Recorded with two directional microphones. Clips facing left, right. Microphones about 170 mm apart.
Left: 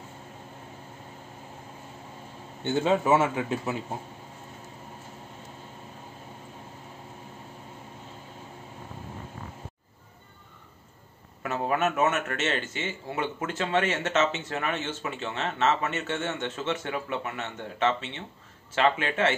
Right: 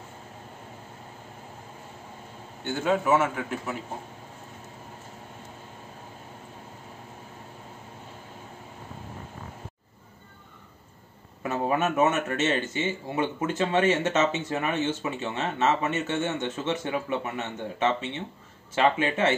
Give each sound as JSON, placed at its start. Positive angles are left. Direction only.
{"t": 2.6, "sound": "a man's voice", "side_deg": 20}
{"t": 11.4, "sound": "speech", "side_deg": -15}